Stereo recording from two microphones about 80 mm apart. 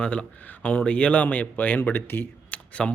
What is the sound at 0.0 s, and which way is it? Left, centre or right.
Speech, centre.